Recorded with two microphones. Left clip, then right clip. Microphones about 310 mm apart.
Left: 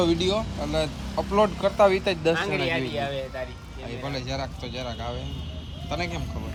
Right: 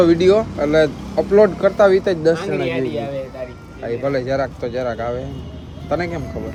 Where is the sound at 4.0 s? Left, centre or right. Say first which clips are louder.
Right 12 dB; centre.